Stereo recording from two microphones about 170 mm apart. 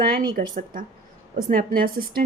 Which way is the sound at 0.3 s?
55° right (ahead or behind).